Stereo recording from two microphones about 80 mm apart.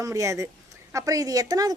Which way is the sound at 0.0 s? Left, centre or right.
Right.